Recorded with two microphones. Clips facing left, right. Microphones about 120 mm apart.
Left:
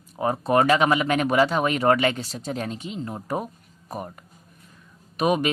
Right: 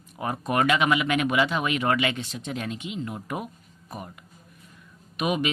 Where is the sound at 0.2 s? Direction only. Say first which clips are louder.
Left 5 dB; 30° left (ahead or behind).